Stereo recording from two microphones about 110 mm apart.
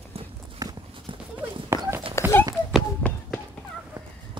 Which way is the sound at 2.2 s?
25° left (ahead or behind).